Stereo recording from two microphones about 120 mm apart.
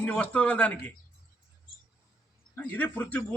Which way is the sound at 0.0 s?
10° left (ahead or behind).